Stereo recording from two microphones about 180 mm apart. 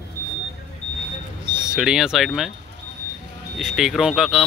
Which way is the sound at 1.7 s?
5° right (ahead or behind).